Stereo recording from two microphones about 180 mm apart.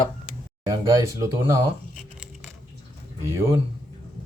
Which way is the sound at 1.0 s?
15° right (ahead or behind).